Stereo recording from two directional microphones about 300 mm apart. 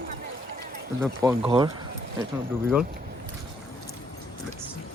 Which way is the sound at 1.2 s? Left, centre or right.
Centre.